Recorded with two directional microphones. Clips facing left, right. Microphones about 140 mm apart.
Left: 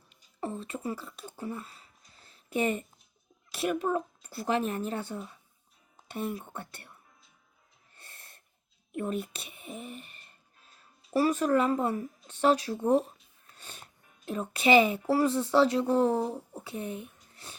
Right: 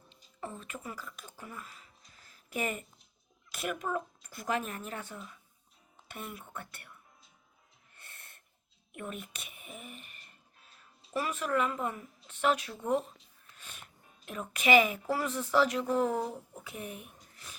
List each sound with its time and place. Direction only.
0.3 s speech: 35° left (ahead or behind)
7.9 s snort: 30° left (ahead or behind)
8.9 s a woman's voice: 35° left (ahead or behind)
17.3 s a sound: 30° left (ahead or behind)